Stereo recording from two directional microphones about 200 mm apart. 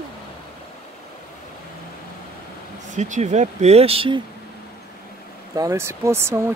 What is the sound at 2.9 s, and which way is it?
Speech, 35° right (ahead or behind).